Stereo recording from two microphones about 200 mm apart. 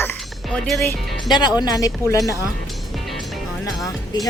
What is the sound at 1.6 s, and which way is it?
Speech, 20° left (ahead or behind).